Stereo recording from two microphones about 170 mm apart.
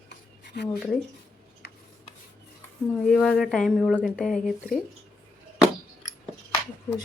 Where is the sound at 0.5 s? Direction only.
75° left (ahead or behind).